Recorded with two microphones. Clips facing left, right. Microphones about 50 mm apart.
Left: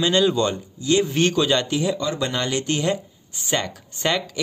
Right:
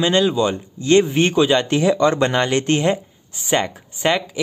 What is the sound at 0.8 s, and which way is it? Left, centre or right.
Speech, right.